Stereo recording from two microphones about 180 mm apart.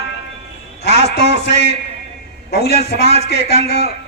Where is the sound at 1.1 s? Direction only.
70° left (ahead or behind).